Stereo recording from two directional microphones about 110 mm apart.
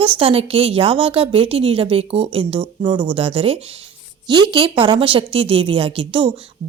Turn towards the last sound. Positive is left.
turn(degrees=-50)  # may be behind; listen again after turning